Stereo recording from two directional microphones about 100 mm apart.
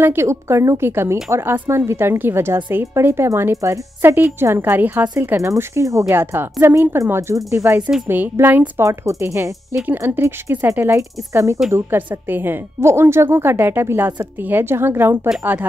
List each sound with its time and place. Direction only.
0.0 s a woman's voice: 25° right (ahead or behind)
5.6 s speech: 30° right (ahead or behind)
6.1 s a woman's voice: 20° right (ahead or behind)
7.8 s a woman's voice: 15° right (ahead or behind); by 11.6 s 30° right (ahead or behind)
11.7 s a woman's voice: 20° right (ahead or behind)